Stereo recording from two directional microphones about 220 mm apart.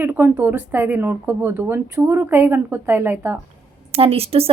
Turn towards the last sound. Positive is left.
turn(degrees=-25)  # may be behind; listen again after turning